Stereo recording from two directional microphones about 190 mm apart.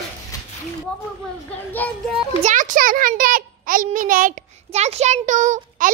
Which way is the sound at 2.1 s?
40° right (ahead or behind).